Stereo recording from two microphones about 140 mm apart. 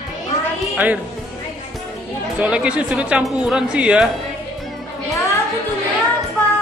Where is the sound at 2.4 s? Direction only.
10° right (ahead or behind).